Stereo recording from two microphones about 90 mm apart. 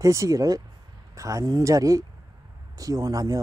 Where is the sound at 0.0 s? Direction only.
35° right (ahead or behind).